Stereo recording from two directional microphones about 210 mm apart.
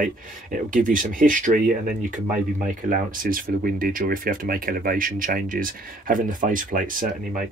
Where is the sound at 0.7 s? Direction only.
40° right (ahead or behind).